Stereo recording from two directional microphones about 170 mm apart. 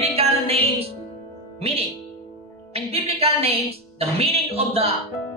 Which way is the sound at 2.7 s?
35° right (ahead or behind).